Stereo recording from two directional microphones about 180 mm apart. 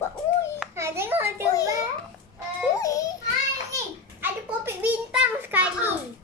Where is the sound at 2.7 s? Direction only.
20° left (ahead or behind).